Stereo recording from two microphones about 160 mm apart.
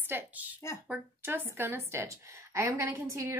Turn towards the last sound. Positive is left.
turn(degrees=-15)  # may be behind; listen again after turning